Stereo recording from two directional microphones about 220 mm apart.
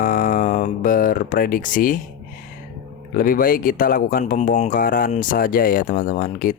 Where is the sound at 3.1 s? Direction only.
40° left (ahead or behind).